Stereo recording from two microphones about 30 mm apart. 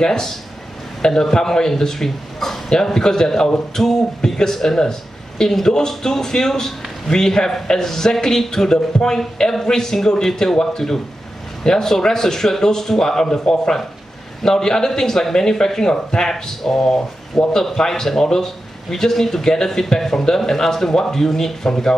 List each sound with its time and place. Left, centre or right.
0.0 s speech: centre
2.0 s speech: centre
2.7 s speech: centre